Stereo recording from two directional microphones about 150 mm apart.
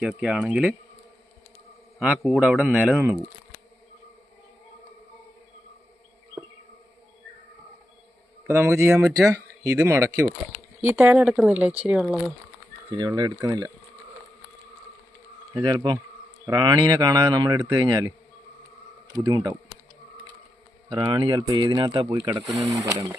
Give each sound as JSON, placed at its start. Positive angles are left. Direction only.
{"t": 0.0, "sound": "speech", "side_deg": -5}
{"t": 2.2, "sound": "speech", "side_deg": 0}
{"t": 8.4, "sound": "speech", "side_deg": -15}
{"t": 12.9, "sound": "speech", "side_deg": -25}
{"t": 15.6, "sound": "speech", "side_deg": -30}
{"t": 19.1, "sound": "speech", "side_deg": -25}
{"t": 21.0, "sound": "speech", "side_deg": -30}